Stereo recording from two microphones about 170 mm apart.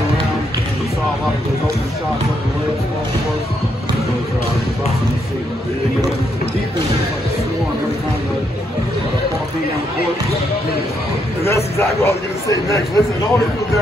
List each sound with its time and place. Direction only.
11.4 s a man's voice: 15° left (ahead or behind)